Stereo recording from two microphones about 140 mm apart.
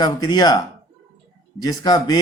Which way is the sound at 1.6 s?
25° left (ahead or behind).